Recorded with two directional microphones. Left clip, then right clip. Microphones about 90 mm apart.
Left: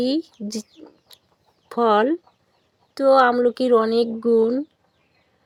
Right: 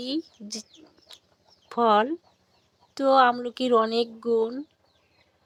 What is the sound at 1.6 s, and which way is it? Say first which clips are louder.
Speech: left 3 dB; 30° left (ahead or behind).